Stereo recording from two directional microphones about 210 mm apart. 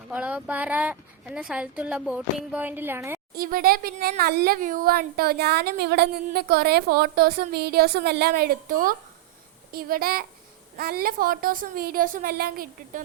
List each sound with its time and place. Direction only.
0.1 s a woman's voice: 5° right (ahead or behind)
3.3 s speech: 45° right (ahead or behind)